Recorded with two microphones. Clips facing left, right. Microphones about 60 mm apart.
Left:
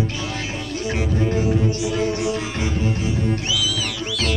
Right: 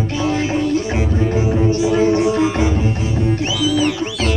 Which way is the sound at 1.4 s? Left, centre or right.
Right.